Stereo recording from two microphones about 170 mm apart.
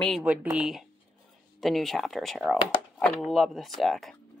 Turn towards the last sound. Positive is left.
turn(degrees=0)  # may be behind; listen again after turning